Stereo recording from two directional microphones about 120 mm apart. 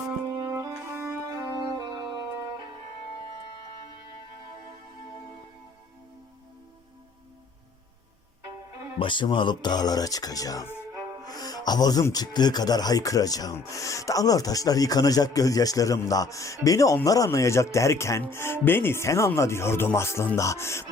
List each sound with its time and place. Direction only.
0.5 s music: 25° right (ahead or behind)
9.0 s speech: 40° left (ahead or behind); by 20.8 s 20° left (ahead or behind)